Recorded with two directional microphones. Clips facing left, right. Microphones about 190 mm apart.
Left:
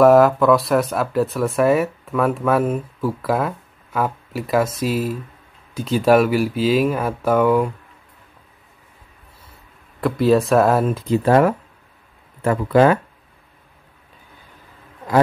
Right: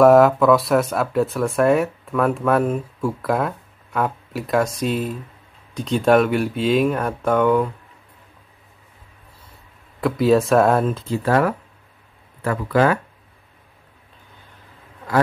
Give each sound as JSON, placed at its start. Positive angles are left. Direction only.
{"t": 0.0, "sound": "speech", "side_deg": 0}
{"t": 9.9, "sound": "speech", "side_deg": 0}
{"t": 11.2, "sound": "speech", "side_deg": 25}